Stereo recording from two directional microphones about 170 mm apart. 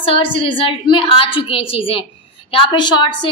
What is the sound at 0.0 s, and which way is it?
A woman's voice, 30° left (ahead or behind).